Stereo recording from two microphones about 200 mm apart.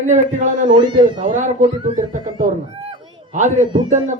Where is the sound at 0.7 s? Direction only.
20° right (ahead or behind).